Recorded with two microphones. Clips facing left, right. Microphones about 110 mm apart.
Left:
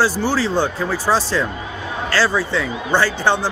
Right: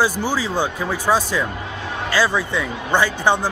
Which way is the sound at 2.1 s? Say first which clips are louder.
Left 1 dB; 15° right (ahead or behind).